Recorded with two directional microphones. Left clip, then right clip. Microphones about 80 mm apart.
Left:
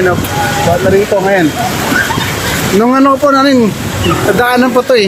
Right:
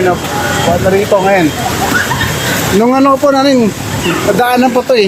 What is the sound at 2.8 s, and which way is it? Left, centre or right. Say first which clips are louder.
Speech: even; left.